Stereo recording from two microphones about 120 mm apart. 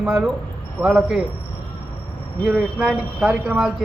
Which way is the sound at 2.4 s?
5° right (ahead or behind).